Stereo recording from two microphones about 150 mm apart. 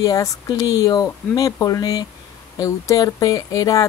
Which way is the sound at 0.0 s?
20° left (ahead or behind).